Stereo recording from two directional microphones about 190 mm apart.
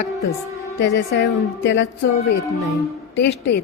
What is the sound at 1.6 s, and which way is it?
Music, 70° left (ahead or behind).